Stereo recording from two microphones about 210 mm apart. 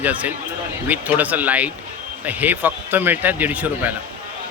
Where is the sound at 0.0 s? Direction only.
5° right (ahead or behind).